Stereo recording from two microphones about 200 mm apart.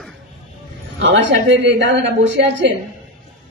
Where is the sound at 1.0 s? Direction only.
65° right (ahead or behind).